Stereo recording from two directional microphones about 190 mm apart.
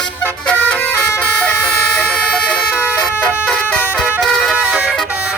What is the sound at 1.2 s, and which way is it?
Vehicle, 10° left (ahead or behind).